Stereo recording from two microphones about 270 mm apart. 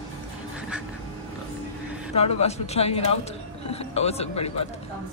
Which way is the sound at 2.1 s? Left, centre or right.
Left.